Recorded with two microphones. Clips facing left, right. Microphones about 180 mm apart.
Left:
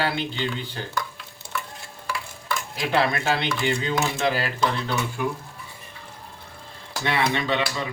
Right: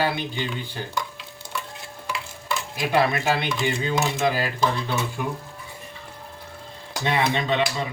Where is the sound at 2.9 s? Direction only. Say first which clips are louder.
Right 1 dB; 15° right (ahead or behind).